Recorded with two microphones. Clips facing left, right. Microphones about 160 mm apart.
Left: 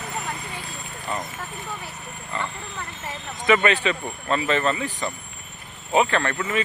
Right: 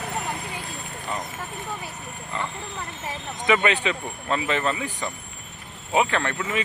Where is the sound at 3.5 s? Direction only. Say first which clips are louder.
Left 2 dB; 15° right (ahead or behind).